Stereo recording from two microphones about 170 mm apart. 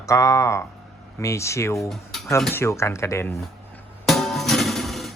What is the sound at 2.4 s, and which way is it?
Speech, 10° left (ahead or behind).